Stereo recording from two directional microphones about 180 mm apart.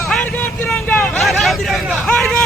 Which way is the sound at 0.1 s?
5° left (ahead or behind).